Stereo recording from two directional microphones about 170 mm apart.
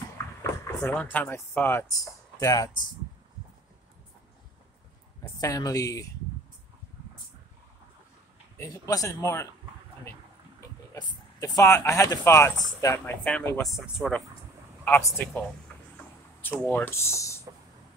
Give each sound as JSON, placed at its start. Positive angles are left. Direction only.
{"t": 0.4, "sound": "speech", "side_deg": 15}
{"t": 5.4, "sound": "speech", "side_deg": 20}
{"t": 8.5, "sound": "speech", "side_deg": 20}
{"t": 11.0, "sound": "speech", "side_deg": 20}
{"t": 14.9, "sound": "speech", "side_deg": 15}
{"t": 15.7, "sound": "a sound", "side_deg": 5}
{"t": 16.3, "sound": "speech", "side_deg": 10}